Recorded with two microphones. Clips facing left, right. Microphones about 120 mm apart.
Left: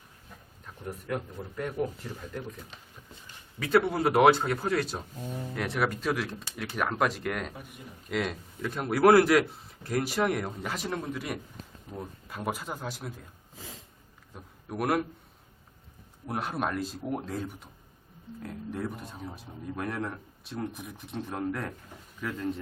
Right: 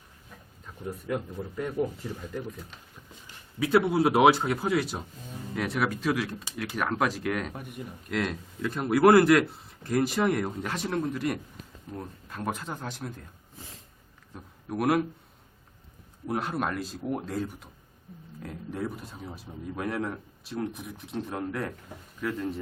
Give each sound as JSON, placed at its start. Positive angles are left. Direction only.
{"t": 0.6, "sound": "speech", "side_deg": -10}
{"t": 3.6, "sound": "speech", "side_deg": -10}
{"t": 7.5, "sound": "a man's voice", "side_deg": -60}
{"t": 8.1, "sound": "speech", "side_deg": 0}
{"t": 14.3, "sound": "a man's voice", "side_deg": 0}
{"t": 16.2, "sound": "speech", "side_deg": 0}